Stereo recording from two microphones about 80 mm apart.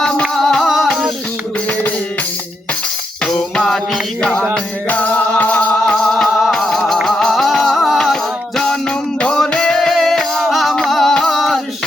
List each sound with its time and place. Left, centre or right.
0.0 s music: centre
3.2 s music: centre